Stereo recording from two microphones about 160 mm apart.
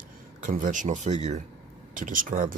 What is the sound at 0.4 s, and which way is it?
Speech, 55° right (ahead or behind).